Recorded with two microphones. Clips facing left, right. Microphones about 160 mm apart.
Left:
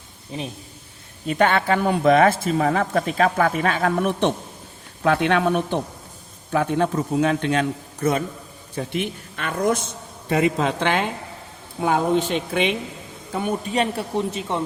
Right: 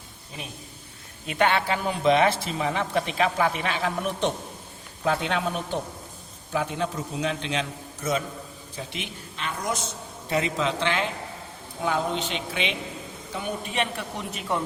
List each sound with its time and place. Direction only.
1.3 s a man's voice: 45° left (ahead or behind)
13.9 s speech: 30° left (ahead or behind)